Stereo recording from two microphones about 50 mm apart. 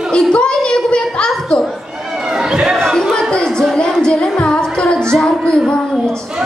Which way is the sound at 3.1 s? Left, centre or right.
Centre.